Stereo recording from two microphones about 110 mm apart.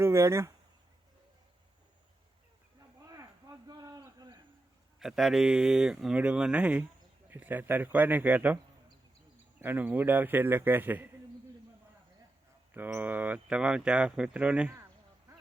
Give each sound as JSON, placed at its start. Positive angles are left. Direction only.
{"t": 0.0, "sound": "speech", "side_deg": -25}
{"t": 3.1, "sound": "a sound", "side_deg": -30}
{"t": 4.9, "sound": "speech", "side_deg": -5}
{"t": 9.6, "sound": "speech", "side_deg": -15}
{"t": 12.7, "sound": "speech", "side_deg": -15}